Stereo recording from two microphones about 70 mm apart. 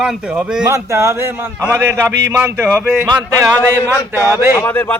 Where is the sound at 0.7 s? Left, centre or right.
Right.